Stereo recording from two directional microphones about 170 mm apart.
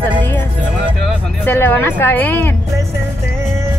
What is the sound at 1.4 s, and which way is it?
Speech, 10° left (ahead or behind).